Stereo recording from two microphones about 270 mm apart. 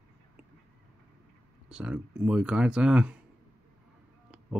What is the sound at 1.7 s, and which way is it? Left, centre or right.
Speech, centre.